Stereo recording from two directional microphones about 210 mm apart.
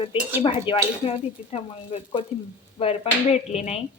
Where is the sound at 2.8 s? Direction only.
30° left (ahead or behind).